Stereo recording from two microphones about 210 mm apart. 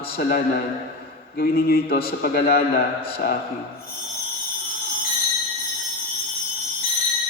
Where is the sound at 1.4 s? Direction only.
45° left (ahead or behind).